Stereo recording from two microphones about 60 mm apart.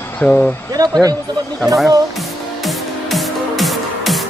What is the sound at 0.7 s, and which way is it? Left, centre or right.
Speech, right.